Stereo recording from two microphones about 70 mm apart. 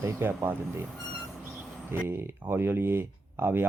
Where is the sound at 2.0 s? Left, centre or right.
Right.